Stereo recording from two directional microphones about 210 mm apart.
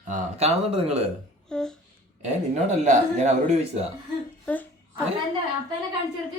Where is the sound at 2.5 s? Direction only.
35° right (ahead or behind).